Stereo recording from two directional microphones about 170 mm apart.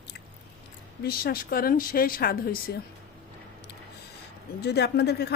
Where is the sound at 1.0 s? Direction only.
60° left (ahead or behind).